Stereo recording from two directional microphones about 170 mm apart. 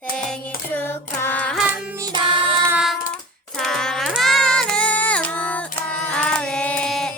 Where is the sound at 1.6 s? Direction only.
10° right (ahead or behind).